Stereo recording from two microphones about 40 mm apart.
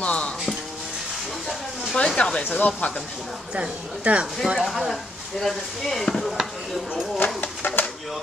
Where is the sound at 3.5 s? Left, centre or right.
Right.